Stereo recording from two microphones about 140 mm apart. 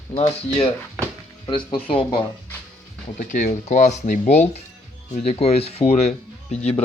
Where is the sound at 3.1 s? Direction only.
65° left (ahead or behind).